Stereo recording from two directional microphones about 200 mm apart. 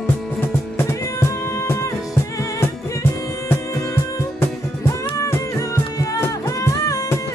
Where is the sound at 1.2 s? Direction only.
15° left (ahead or behind).